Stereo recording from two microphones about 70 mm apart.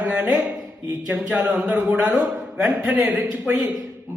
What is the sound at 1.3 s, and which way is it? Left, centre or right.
Speech, centre.